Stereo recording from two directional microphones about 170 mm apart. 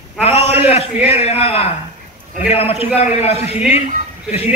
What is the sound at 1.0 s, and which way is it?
A man's voice, 35° left (ahead or behind).